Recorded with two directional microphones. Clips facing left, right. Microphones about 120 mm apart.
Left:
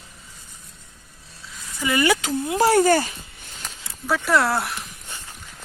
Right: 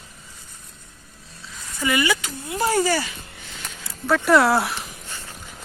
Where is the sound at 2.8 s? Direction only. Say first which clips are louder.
Left 4 dB; 50° left (ahead or behind).